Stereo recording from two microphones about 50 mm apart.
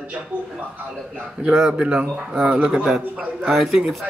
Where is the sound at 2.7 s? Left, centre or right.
Centre.